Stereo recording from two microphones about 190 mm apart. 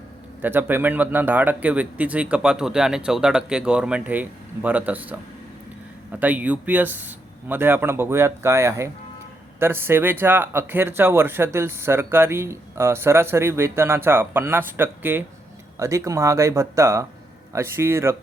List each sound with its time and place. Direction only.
0.4 s speech: 10° right (ahead or behind)